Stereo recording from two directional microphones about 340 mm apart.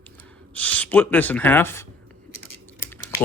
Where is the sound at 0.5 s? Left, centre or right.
Centre.